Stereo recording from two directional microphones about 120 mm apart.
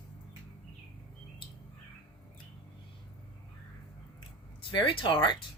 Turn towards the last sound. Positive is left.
turn(degrees=40)  # may be behind; listen again after turning